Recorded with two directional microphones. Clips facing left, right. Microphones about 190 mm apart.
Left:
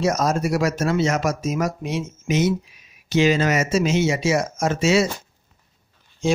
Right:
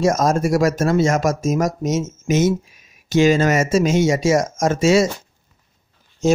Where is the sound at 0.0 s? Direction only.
50° right (ahead or behind).